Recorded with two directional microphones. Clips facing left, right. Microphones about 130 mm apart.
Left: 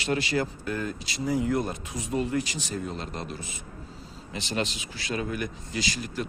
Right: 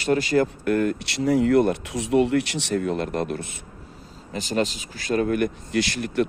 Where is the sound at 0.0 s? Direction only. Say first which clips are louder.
Right 7 dB; 45° right (ahead or behind); by 3.6 s 60° right (ahead or behind).